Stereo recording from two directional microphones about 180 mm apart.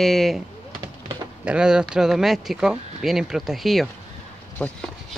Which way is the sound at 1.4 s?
5° right (ahead or behind).